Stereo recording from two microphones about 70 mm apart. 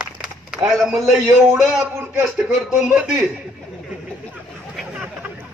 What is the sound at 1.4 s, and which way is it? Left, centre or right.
Speech, right.